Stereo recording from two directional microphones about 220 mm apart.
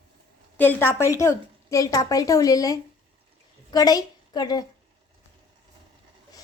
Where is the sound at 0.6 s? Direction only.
10° left (ahead or behind).